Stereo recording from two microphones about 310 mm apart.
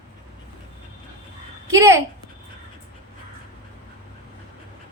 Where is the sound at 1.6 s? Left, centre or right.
Centre.